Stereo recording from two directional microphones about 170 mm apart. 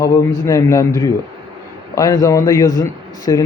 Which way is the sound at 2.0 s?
20° left (ahead or behind).